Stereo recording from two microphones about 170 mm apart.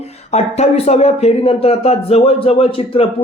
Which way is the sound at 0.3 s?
40° left (ahead or behind).